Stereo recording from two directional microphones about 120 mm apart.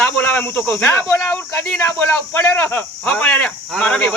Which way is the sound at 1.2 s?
10° left (ahead or behind).